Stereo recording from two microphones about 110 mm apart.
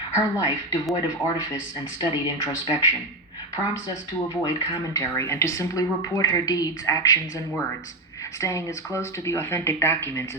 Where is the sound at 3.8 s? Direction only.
35° left (ahead or behind).